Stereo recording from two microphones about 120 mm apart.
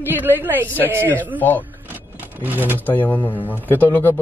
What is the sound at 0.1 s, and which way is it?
A man's voice, 15° right (ahead or behind).